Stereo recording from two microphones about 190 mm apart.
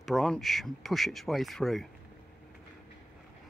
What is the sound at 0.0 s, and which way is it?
Speech, centre (ahead or behind).